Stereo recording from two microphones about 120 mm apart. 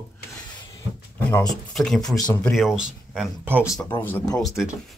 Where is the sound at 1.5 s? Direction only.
5° left (ahead or behind).